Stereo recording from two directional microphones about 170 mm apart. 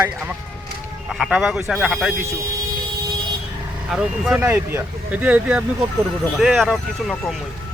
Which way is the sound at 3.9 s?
5° right (ahead or behind).